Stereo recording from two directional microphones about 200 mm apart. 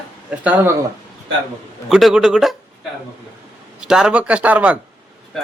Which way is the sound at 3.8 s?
5° right (ahead or behind).